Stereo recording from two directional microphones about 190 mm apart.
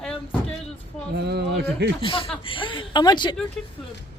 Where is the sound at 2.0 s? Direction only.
30° left (ahead or behind).